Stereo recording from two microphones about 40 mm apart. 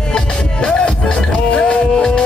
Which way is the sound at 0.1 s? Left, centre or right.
Left.